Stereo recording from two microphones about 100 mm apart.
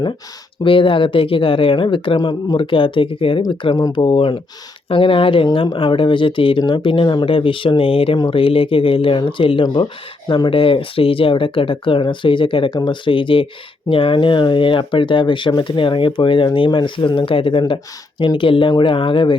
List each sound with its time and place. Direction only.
0.6 s speech: 60° left (ahead or behind)
2.1 s speech: 50° left (ahead or behind); by 3.4 s 65° left (ahead or behind)
3.5 s speech: 50° left (ahead or behind)
4.0 s speech: 60° left (ahead or behind)
10.2 s speech: 50° left (ahead or behind)